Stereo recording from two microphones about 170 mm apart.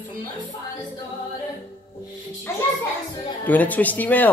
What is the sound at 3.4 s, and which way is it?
Speech, 10° left (ahead or behind).